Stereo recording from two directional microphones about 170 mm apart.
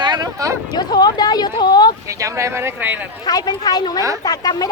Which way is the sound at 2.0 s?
20° right (ahead or behind).